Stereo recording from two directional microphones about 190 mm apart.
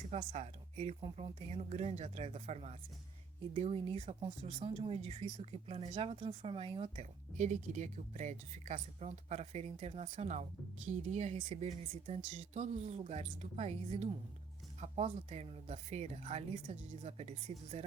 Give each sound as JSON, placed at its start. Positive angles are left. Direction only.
{"t": 0.1, "sound": "speech", "side_deg": -35}